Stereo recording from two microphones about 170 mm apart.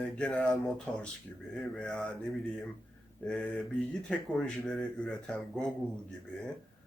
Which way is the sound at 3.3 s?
5° left (ahead or behind).